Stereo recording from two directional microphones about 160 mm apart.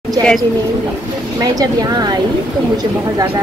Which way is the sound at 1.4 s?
25° right (ahead or behind).